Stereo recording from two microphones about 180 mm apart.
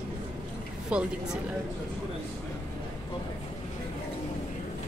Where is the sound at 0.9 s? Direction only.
5° right (ahead or behind).